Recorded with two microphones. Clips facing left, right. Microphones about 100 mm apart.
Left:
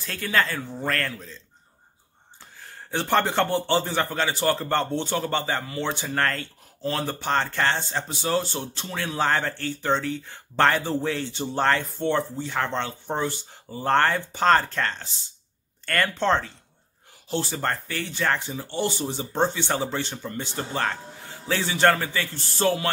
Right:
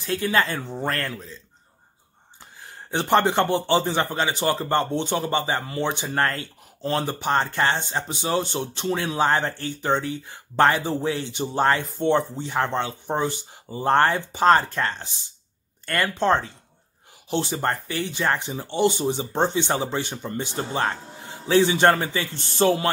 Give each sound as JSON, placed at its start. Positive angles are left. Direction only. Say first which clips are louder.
{"t": 0.0, "sound": "speech", "louder": "right 3 dB", "side_deg": -20}
{"t": 2.6, "sound": "speech", "louder": "right 2 dB", "side_deg": -20}